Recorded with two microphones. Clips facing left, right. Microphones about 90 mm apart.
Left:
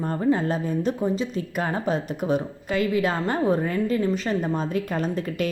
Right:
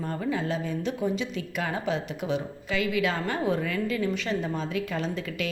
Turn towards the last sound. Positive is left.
turn(degrees=45)  # may be behind; listen again after turning